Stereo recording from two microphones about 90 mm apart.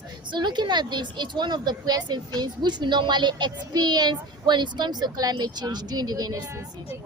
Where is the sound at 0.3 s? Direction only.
55° right (ahead or behind).